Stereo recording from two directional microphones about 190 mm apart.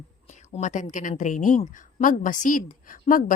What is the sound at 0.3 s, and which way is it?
A woman's voice, 40° left (ahead or behind).